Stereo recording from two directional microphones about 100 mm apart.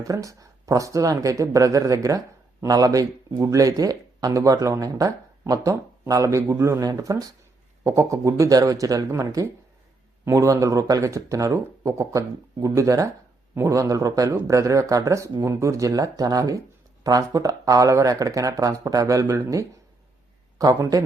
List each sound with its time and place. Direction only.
0.0 s speech: 35° right (ahead or behind)
13.7 s speech: 35° right (ahead or behind)
20.6 s speech: 35° right (ahead or behind)